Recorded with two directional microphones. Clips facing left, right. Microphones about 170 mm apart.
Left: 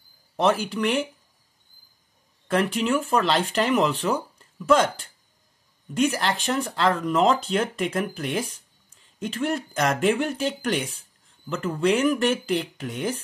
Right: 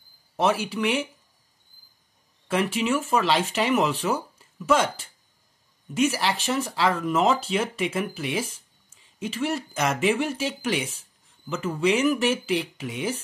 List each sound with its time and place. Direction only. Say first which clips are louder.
0.4 s speech: left 1 dB; 5° right (ahead or behind)
2.4 s speech: left 1 dB; 5° right (ahead or behind)